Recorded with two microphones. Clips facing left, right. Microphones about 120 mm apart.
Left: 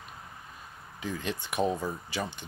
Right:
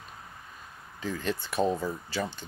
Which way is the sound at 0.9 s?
10° left (ahead or behind).